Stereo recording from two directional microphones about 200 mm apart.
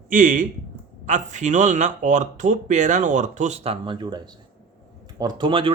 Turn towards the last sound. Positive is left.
turn(degrees=-25)  # may be behind; listen again after turning